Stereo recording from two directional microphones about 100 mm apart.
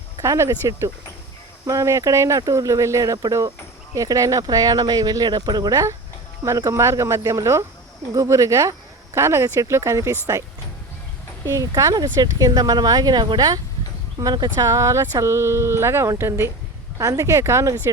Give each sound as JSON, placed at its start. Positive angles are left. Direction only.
{"t": 0.2, "sound": "speech", "side_deg": -30}
{"t": 11.4, "sound": "speech", "side_deg": -35}
{"t": 14.2, "sound": "speech", "side_deg": -30}